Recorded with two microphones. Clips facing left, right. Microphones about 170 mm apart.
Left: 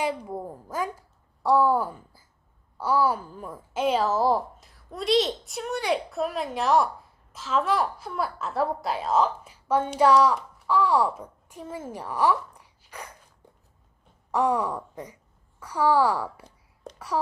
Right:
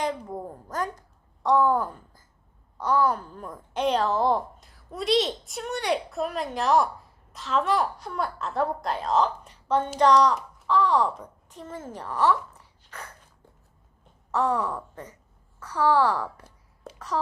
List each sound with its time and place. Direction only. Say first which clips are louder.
0.0 s a woman's voice: left 1 dB; 10° left (ahead or behind)
14.3 s a woman's voice: left 1 dB; 10° left (ahead or behind)